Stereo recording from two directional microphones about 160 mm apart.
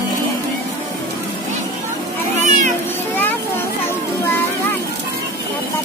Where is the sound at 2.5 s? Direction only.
50° right (ahead or behind).